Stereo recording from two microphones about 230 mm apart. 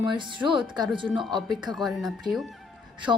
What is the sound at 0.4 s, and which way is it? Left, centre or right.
A woman's voice, centre.